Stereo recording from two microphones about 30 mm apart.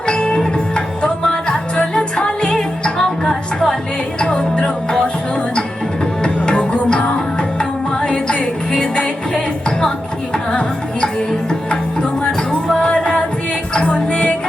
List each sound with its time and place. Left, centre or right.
0.1 s music: left
4.2 s music: left
6.2 s music: left
12.8 s music: left